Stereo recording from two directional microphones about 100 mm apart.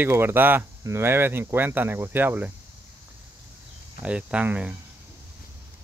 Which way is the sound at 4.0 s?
10° right (ahead or behind).